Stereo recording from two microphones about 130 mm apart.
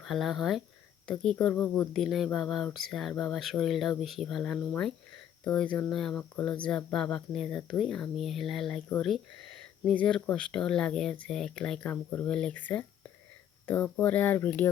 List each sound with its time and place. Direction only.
0.0 s speech: centre (ahead or behind)